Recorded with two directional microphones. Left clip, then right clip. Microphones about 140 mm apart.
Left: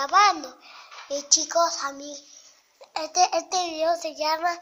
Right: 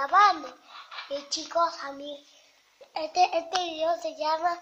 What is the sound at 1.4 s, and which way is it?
Child singing, 25° left (ahead or behind).